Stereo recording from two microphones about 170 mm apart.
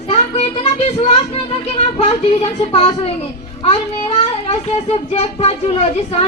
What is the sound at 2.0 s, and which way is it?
Child singing, 40° left (ahead or behind).